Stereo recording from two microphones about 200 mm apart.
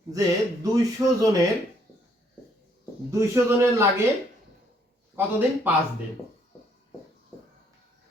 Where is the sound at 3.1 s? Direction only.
15° right (ahead or behind).